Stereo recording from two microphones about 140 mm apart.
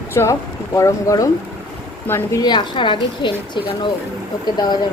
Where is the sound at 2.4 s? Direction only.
35° left (ahead or behind).